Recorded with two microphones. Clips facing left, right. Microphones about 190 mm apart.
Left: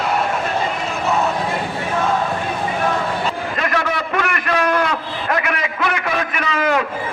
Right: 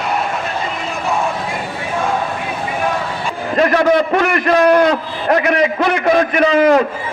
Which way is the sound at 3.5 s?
35° right (ahead or behind).